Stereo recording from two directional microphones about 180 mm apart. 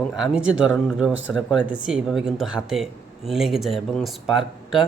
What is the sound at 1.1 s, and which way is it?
Speech, 90° right.